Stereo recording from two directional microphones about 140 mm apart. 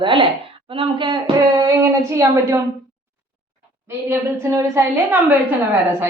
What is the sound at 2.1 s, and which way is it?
Speech, 20° right (ahead or behind).